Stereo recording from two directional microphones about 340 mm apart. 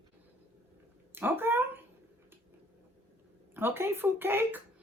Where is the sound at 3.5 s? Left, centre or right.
Centre.